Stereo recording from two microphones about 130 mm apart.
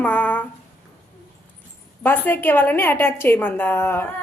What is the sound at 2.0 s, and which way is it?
A woman's voice, 15° left (ahead or behind).